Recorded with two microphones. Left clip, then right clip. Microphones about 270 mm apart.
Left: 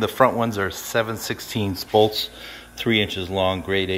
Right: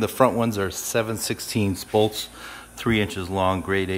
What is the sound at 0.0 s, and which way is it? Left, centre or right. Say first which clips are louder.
Speech: left 2 dB; centre.